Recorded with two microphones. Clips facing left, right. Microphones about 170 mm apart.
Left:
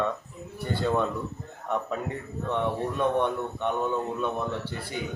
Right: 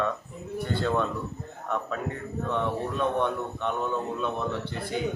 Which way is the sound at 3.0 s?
15° left (ahead or behind).